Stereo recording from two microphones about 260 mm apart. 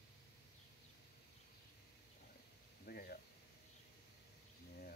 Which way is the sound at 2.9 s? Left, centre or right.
Left.